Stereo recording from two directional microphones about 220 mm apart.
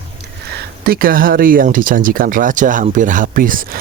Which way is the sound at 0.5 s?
45° right (ahead or behind).